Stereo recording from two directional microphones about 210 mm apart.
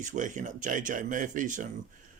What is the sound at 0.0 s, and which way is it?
Speech, 35° right (ahead or behind).